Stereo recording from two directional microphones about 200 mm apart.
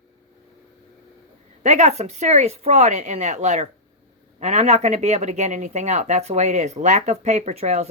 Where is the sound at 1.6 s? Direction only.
35° right (ahead or behind).